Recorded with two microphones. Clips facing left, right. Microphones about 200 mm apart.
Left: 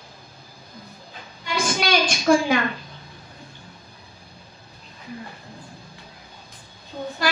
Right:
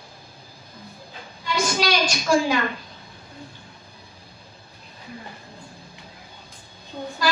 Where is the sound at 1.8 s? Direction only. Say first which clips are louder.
Left 2 dB; 55° left (ahead or behind).